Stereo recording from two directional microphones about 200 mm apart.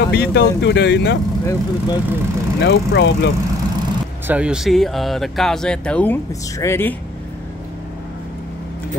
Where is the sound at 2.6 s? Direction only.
60° left (ahead or behind).